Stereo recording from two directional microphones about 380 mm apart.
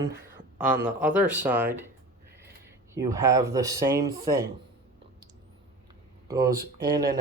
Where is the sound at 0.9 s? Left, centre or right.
Centre.